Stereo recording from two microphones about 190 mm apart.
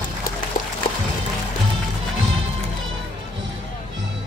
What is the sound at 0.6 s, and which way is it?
Music, 45° left (ahead or behind).